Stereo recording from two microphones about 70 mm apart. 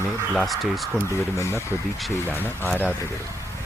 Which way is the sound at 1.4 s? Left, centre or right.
Left.